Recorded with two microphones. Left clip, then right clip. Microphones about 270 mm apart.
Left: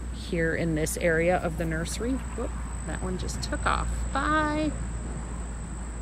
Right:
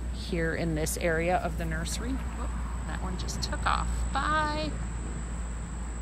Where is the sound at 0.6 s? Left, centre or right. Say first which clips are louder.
Left 3 dB; centre.